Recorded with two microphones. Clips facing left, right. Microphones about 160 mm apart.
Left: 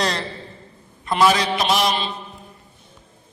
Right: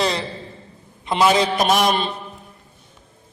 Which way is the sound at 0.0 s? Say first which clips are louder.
Right 2 dB; centre (ahead or behind).